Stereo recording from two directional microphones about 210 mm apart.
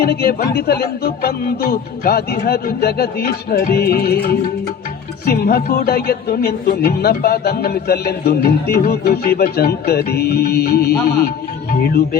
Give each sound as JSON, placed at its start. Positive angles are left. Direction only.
{"t": 0.0, "sound": "speech", "side_deg": 50}